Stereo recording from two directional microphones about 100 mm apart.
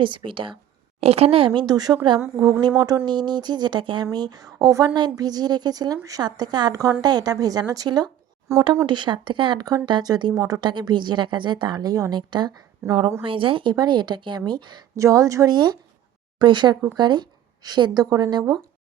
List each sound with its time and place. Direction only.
0.0 s speech: 55° right (ahead or behind)
1.0 s speech: 85° right; by 8.1 s 45° right (ahead or behind)
8.5 s speech: 30° right (ahead or behind)
8.9 s speech: 50° right (ahead or behind)
9.6 s speech: 40° right (ahead or behind)
12.8 s a woman's voice: 25° right (ahead or behind)
13.2 s speech: 60° right (ahead or behind)
14.9 s speech: 35° right (ahead or behind)